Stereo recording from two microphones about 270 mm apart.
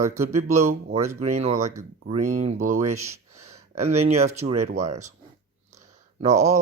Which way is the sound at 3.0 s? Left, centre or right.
Right.